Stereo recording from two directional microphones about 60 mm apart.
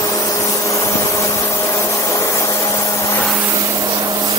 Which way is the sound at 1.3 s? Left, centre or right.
Left.